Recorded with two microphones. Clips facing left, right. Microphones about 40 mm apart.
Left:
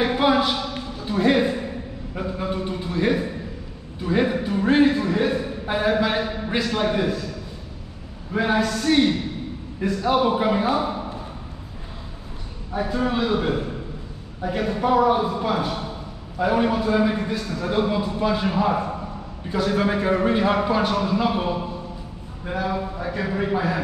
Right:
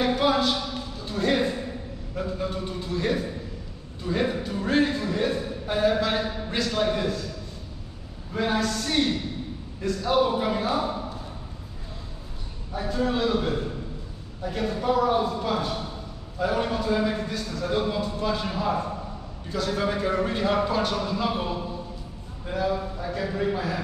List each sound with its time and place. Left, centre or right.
0.0 s a sound: left
2.1 s a man's voice: left
8.3 s a man's voice: left
12.7 s a man's voice: centre